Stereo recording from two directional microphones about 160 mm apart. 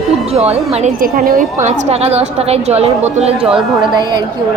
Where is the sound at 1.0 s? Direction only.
60° right (ahead or behind); by 3.5 s 40° right (ahead or behind).